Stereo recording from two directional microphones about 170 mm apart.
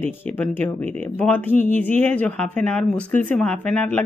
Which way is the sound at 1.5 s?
50° left (ahead or behind).